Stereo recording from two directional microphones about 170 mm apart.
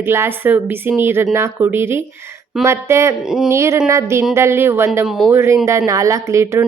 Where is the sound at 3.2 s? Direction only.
5° right (ahead or behind).